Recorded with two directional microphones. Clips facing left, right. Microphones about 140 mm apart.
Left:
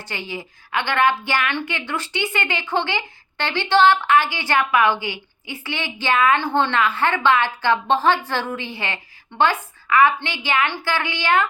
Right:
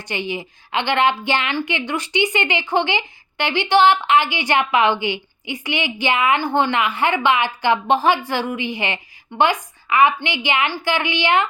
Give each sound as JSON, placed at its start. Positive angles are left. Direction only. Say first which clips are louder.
{"t": 0.0, "sound": "a woman's voice", "louder": "right 5 dB", "side_deg": -20}